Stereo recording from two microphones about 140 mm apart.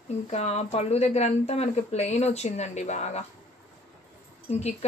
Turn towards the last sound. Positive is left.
turn(degrees=50)  # may be behind; listen again after turning